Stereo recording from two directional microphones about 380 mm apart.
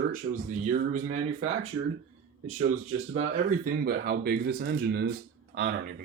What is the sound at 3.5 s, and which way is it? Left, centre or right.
Speech, right.